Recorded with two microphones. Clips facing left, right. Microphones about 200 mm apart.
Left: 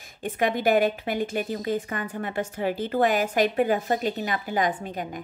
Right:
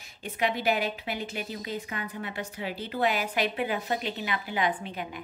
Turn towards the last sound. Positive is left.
turn(degrees=45)  # may be behind; listen again after turning